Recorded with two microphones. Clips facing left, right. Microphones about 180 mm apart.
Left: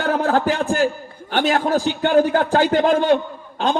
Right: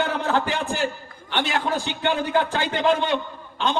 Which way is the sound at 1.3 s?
45° left (ahead or behind).